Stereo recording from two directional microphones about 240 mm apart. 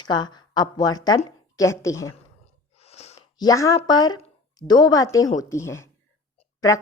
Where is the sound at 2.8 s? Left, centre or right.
Left.